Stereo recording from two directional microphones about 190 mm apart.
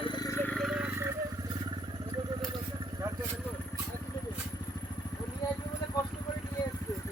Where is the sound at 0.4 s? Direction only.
Centre (ahead or behind).